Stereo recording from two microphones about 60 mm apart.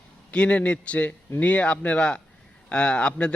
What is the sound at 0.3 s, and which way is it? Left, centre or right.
A man's voice, centre.